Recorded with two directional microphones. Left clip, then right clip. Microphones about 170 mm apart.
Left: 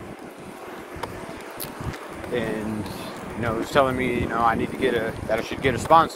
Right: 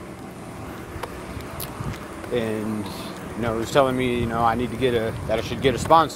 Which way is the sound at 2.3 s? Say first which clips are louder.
Right 2 dB; 20° right (ahead or behind).